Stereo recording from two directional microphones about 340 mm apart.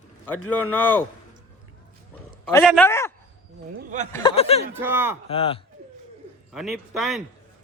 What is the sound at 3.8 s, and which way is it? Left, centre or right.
Speech, right.